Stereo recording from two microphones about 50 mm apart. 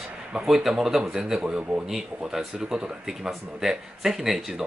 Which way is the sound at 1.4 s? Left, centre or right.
Right.